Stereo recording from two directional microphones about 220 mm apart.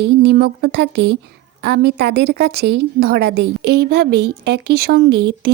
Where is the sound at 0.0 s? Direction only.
50° right (ahead or behind).